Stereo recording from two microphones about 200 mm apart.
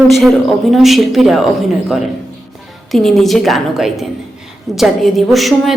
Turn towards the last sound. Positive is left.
turn(degrees=0)  # may be behind; listen again after turning